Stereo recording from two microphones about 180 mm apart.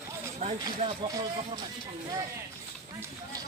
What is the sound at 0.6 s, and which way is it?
Speech, 20° right (ahead or behind).